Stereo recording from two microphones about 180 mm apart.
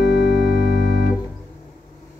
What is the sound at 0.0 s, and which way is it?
Music, 65° left (ahead or behind).